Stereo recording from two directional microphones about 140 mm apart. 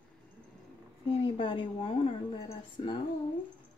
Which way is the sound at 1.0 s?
40° left (ahead or behind).